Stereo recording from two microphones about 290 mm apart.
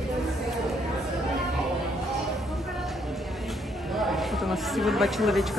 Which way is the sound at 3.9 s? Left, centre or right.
Centre.